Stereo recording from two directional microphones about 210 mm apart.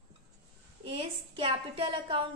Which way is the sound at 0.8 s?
25° right (ahead or behind).